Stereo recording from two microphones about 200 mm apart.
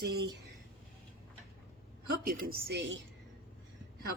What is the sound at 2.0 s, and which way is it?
Speech, 50° right (ahead or behind).